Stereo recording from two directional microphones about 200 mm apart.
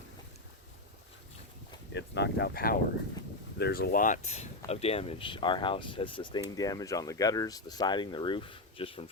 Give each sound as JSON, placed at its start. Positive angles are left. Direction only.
{"t": 1.9, "sound": "speech", "side_deg": 60}